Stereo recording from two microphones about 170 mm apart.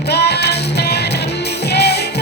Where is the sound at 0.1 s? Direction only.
75° left (ahead or behind).